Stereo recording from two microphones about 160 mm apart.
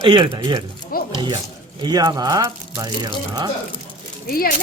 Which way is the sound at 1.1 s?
25° right (ahead or behind).